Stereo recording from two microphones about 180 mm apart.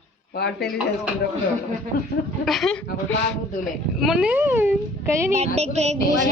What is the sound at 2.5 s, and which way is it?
Speech, centre (ahead or behind).